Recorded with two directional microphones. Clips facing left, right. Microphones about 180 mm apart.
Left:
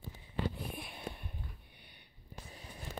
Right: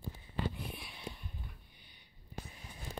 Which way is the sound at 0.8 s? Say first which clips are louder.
Left 3 dB; 50° left (ahead or behind).